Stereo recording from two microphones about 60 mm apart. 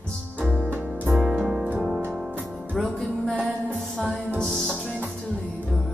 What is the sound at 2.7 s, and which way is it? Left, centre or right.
Music, centre.